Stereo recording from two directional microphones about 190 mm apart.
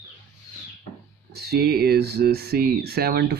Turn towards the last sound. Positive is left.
turn(degrees=-55)  # may be behind; listen again after turning